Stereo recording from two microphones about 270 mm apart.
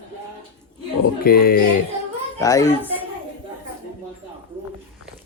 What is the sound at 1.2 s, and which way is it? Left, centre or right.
Speech, left.